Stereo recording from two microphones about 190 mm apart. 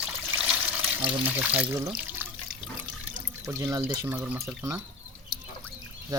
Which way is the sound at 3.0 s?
15° right (ahead or behind).